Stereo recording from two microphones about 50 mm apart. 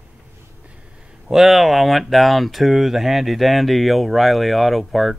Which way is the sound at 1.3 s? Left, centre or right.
Centre.